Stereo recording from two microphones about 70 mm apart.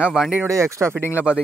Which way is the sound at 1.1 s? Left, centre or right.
Centre.